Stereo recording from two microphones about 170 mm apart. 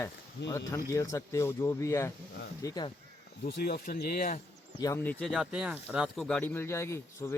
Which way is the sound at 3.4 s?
60° left (ahead or behind).